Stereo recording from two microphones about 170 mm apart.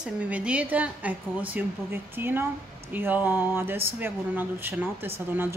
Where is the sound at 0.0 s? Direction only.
5° right (ahead or behind).